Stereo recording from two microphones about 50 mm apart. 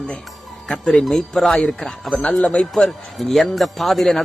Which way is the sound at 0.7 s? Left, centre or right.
Centre.